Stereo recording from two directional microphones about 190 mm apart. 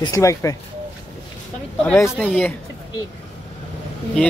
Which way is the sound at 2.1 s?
Centre (ahead or behind).